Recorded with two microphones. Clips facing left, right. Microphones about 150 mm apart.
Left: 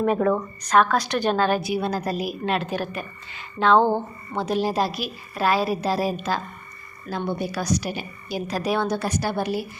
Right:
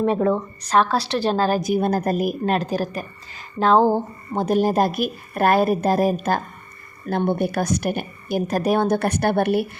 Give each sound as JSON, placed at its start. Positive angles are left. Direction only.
{"t": 0.0, "sound": "a woman's voice", "side_deg": -25}
{"t": 2.5, "sound": "a woman's voice", "side_deg": -40}